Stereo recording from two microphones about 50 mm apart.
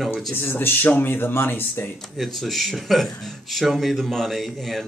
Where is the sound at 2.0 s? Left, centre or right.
Centre.